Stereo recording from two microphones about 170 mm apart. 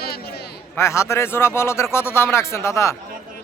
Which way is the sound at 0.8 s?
15° left (ahead or behind).